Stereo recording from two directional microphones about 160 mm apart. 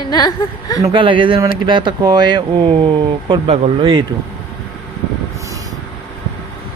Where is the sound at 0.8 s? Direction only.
30° right (ahead or behind).